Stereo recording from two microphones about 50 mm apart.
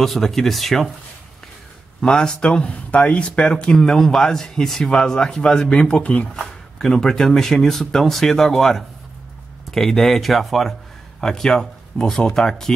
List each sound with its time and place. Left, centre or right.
0.0 s speech: centre
2.0 s speech: centre
2.6 s speech: left
3.7 s speech: centre
6.4 s speech: centre